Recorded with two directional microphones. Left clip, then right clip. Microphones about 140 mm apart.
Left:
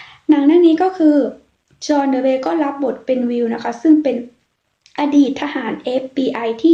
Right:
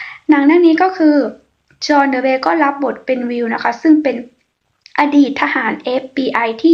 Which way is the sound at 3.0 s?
50° left (ahead or behind).